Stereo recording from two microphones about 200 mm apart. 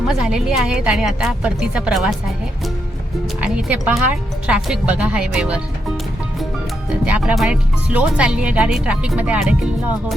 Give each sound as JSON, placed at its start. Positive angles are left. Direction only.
{"t": 0.1, "sound": "speech", "side_deg": -5}
{"t": 3.4, "sound": "speech", "side_deg": -5}
{"t": 7.0, "sound": "speech", "side_deg": -5}